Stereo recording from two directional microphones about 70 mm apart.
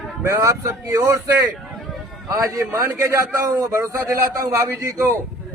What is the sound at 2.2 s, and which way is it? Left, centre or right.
A man's voice, right.